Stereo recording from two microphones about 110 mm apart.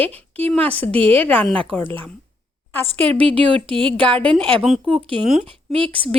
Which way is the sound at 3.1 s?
55° right (ahead or behind).